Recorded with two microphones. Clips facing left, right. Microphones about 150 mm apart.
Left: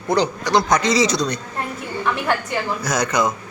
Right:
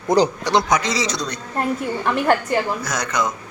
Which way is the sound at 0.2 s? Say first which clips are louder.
Right 1 dB; 30° right (ahead or behind).